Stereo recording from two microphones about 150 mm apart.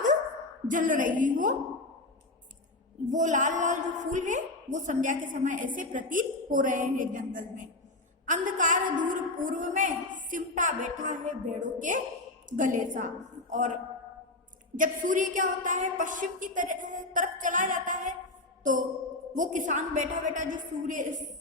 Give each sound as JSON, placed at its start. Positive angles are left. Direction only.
{"t": 0.7, "sound": "a woman's voice", "side_deg": -60}
{"t": 3.1, "sound": "a woman's voice", "side_deg": -55}
{"t": 14.8, "sound": "a woman's voice", "side_deg": -60}
{"t": 18.6, "sound": "music", "side_deg": -60}
{"t": 19.4, "sound": "a woman's voice", "side_deg": -55}